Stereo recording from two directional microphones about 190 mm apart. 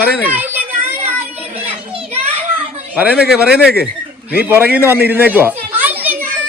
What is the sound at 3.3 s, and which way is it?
A child's voice, 5° right (ahead or behind).